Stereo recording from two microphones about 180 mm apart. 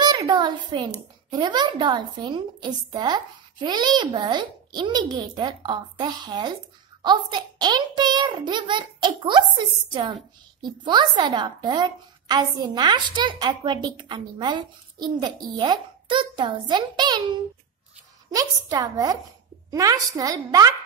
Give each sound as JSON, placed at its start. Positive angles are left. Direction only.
{"t": 0.0, "sound": "a sound", "side_deg": -25}
{"t": 1.3, "sound": "a woman's voice", "side_deg": -25}
{"t": 10.6, "sound": "a woman's voice", "side_deg": -25}